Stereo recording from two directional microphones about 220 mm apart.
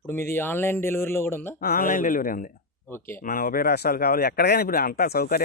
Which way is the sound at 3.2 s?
40° left (ahead or behind).